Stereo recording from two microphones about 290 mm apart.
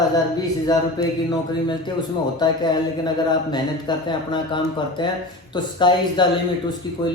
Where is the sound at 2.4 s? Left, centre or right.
Centre.